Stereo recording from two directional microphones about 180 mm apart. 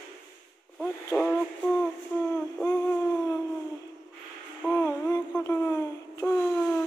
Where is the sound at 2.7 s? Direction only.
10° left (ahead or behind).